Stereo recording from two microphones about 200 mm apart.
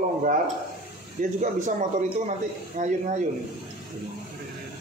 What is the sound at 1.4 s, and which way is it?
Speech, 40° right (ahead or behind).